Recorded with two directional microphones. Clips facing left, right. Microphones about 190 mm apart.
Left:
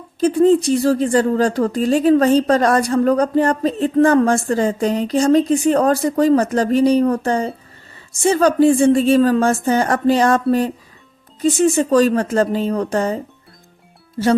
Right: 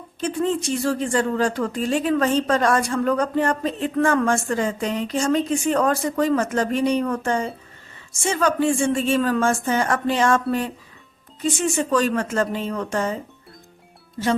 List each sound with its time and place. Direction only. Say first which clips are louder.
0.2 s speech: left 10 dB; 35° left (ahead or behind)
14.2 s speech: left 6 dB; 45° left (ahead or behind)